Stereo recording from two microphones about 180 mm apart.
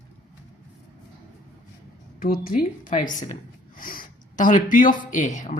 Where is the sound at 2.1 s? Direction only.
55° left (ahead or behind).